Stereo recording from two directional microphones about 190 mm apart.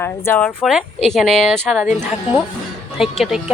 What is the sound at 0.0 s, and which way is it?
Speech, 10° left (ahead or behind).